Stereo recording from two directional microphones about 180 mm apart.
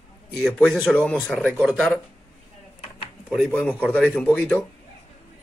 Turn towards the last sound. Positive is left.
turn(degrees=10)  # may be behind; listen again after turning